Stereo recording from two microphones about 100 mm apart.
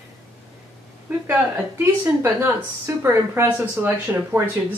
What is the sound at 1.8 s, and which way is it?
Speech, 25° right (ahead or behind).